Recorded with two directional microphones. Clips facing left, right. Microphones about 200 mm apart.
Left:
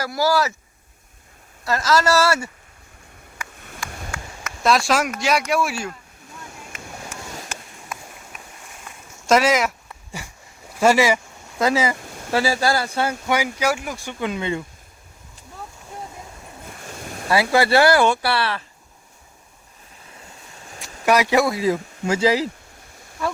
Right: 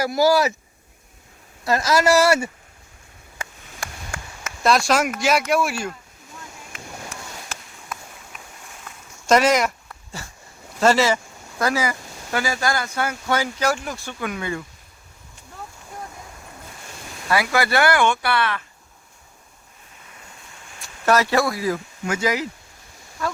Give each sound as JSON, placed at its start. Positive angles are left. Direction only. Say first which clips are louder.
{"t": 0.0, "sound": "speech", "louder": "right 3 dB", "side_deg": -20}
{"t": 1.6, "sound": "speech", "louder": "right 1 dB", "side_deg": -15}
{"t": 4.6, "sound": "speech", "louder": "even", "side_deg": 0}
{"t": 9.2, "sound": "a sound", "louder": "even", "side_deg": 0}
{"t": 10.8, "sound": "speech", "louder": "left 1 dB", "side_deg": 10}
{"t": 11.6, "sound": "speech", "louder": "left 3 dB", "side_deg": 25}
{"t": 13.2, "sound": "speech", "louder": "right 1 dB", "side_deg": 10}
{"t": 17.2, "sound": "speech", "louder": "left 3 dB", "side_deg": 30}
{"t": 21.0, "sound": "speech", "louder": "left 1 dB", "side_deg": 15}